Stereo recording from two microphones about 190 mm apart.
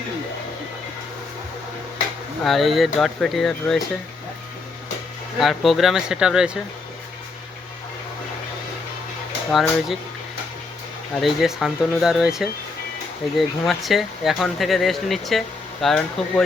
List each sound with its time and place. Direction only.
2.4 s speech: centre (ahead or behind)
5.4 s speech: centre (ahead or behind)
9.5 s speech: centre (ahead or behind)
11.2 s speech: centre (ahead or behind)